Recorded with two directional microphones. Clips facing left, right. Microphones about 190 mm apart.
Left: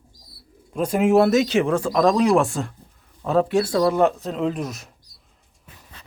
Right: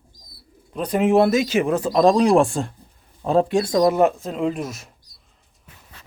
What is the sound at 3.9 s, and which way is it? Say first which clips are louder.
Speech: right 1 dB; 5° right (ahead or behind).